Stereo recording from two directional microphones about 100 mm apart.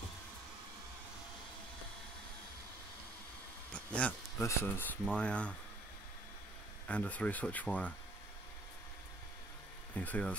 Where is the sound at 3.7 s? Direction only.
15° left (ahead or behind).